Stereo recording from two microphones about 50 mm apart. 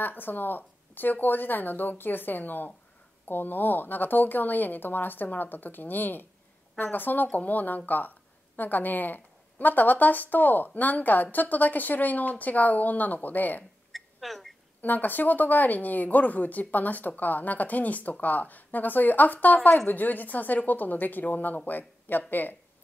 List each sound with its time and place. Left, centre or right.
0.0 s speech: left
13.9 s a sound: centre
14.8 s speech: left